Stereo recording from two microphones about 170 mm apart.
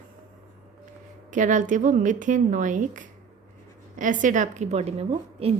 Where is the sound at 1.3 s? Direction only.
45° right (ahead or behind).